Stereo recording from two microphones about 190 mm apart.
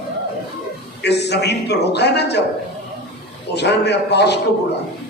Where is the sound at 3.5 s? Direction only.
60° left (ahead or behind).